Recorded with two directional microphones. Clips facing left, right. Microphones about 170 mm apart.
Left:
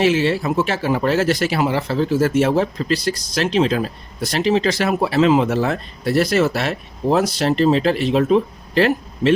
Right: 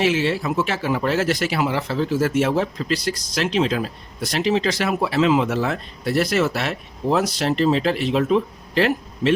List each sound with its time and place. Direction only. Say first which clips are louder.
0.0 s speech: left 3 dB; 35° left (ahead or behind)